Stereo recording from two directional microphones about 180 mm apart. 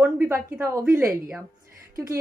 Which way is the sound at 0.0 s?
10° right (ahead or behind).